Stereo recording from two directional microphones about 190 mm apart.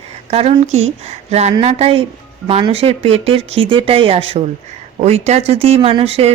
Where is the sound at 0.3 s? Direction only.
30° right (ahead or behind).